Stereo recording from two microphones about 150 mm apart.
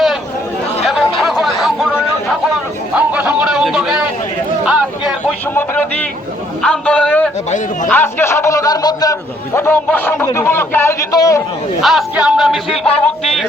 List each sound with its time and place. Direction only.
0.9 s chatter: centre (ahead or behind)
2.9 s a sound: 10° right (ahead or behind)
5.2 s a sound: 10° left (ahead or behind)
6.6 s a man's voice: 5° left (ahead or behind); by 9.1 s 25° left (ahead or behind)
9.6 s a man's voice: 15° left (ahead or behind)
11.8 s music: centre (ahead or behind)